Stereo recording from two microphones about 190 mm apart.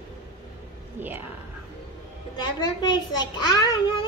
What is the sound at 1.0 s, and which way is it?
Whispering, 10° right (ahead or behind).